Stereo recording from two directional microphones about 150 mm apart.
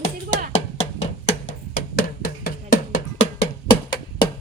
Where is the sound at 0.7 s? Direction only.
50° left (ahead or behind).